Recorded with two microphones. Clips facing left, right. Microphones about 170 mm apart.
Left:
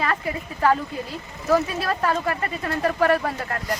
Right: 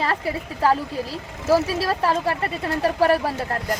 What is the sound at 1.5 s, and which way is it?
A woman's voice, 30° right (ahead or behind).